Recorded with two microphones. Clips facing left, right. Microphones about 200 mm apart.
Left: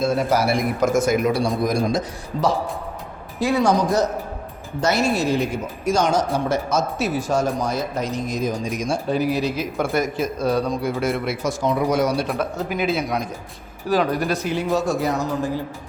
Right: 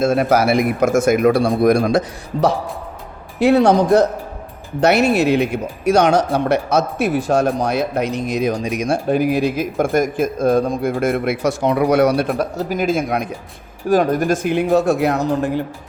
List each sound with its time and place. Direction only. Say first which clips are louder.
0.1 s speech: right 5 dB; 65° right (ahead or behind)
12.4 s a man's voice: right 3 dB; 40° right (ahead or behind); by 15.6 s 65° right (ahead or behind)